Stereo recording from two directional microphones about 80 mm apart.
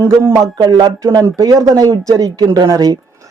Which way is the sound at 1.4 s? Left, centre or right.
Right.